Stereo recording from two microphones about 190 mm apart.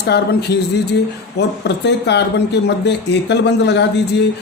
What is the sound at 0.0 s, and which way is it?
A man's voice, 60° left (ahead or behind).